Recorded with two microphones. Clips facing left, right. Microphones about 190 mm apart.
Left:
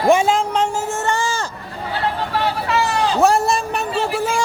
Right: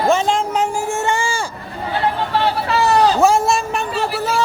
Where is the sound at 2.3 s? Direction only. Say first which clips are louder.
Even; 30° right (ahead or behind).